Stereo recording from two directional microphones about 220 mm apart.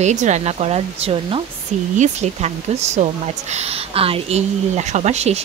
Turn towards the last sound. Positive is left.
turn(degrees=-30)  # may be behind; listen again after turning